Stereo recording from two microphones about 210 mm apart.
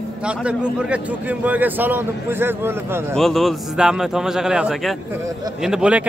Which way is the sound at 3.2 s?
Centre (ahead or behind).